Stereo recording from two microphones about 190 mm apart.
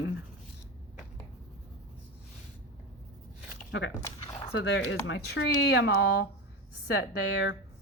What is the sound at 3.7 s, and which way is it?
Speech, 75° left (ahead or behind).